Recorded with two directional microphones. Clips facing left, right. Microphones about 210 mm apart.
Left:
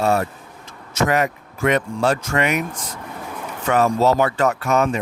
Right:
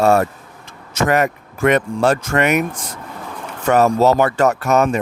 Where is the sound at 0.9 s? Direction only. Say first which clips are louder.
Right 3 dB; 50° right (ahead or behind).